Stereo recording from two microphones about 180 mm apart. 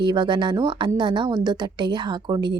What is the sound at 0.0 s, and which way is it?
A woman's voice, 25° right (ahead or behind).